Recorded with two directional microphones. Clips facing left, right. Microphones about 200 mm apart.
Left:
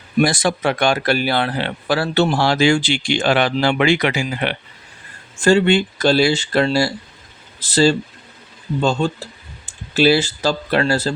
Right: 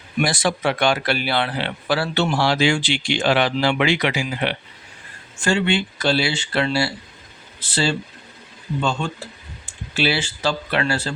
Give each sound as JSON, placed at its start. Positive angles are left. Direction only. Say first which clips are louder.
{"t": 0.2, "sound": "speech", "louder": "left 4 dB", "side_deg": 45}
{"t": 5.4, "sound": "speech", "louder": "left 6 dB", "side_deg": 40}